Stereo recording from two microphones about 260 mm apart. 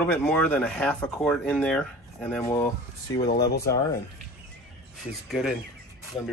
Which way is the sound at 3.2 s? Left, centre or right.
Left.